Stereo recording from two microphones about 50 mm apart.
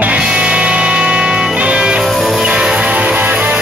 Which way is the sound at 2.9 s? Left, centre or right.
Right.